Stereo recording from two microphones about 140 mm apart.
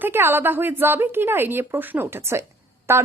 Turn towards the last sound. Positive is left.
turn(degrees=-20)  # may be behind; listen again after turning